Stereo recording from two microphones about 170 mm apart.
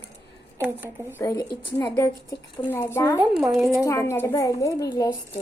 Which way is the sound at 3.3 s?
Centre (ahead or behind).